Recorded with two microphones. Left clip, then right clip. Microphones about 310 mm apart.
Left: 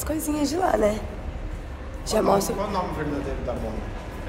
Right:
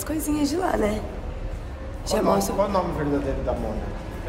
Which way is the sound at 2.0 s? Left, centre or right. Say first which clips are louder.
Left 1 dB; centre.